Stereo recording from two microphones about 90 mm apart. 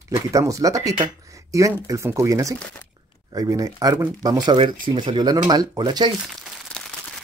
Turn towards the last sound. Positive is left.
turn(degrees=15)  # may be behind; listen again after turning